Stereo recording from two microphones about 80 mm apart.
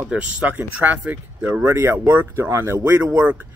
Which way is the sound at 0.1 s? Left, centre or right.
Centre.